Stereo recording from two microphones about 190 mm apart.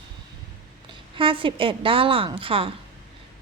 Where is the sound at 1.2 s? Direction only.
25° right (ahead or behind).